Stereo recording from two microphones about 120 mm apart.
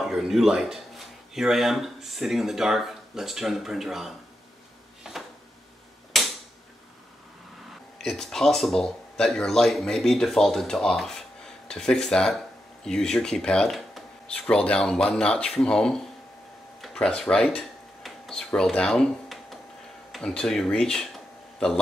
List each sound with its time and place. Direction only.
0.0 s speech: centre (ahead or behind)
5.1 s a sound: 5° right (ahead or behind)
6.1 s mechanisms: centre (ahead or behind)
8.0 s speech: 5° left (ahead or behind)
16.8 s a sound: 5° left (ahead or behind)
20.1 s speech: 5° left (ahead or behind)